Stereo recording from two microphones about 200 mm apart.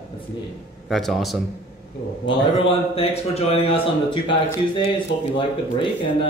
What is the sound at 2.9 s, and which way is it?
Speech, 30° left (ahead or behind).